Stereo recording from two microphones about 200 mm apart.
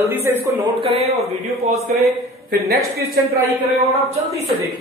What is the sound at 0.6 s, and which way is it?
Speech, 30° right (ahead or behind).